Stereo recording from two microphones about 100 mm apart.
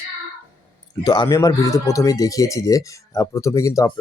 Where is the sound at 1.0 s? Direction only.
50° left (ahead or behind).